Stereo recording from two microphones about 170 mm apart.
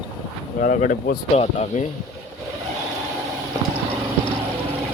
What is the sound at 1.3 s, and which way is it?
Speech, 40° left (ahead or behind).